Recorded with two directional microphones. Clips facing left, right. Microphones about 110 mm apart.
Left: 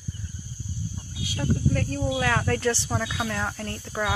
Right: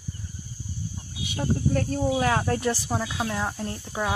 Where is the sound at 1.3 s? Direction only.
30° right (ahead or behind).